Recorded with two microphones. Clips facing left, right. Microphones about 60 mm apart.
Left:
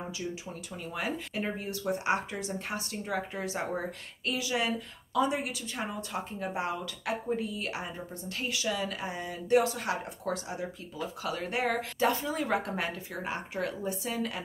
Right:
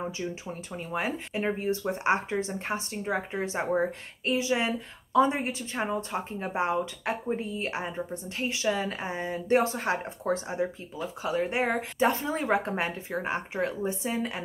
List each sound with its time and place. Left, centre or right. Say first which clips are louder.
0.2 s speech: right 3 dB; right